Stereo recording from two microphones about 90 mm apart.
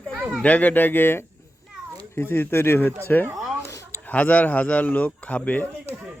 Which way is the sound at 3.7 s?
35° left (ahead or behind).